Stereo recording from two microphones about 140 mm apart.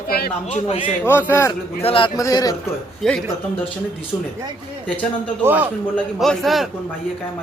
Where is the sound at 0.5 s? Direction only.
55° left (ahead or behind).